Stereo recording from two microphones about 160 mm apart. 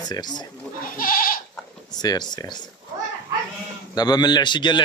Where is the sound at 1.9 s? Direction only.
25° left (ahead or behind).